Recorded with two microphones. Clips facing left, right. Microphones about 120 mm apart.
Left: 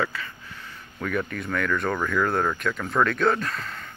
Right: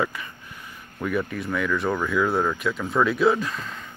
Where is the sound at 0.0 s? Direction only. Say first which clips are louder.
Right 1 dB; 15° right (ahead or behind).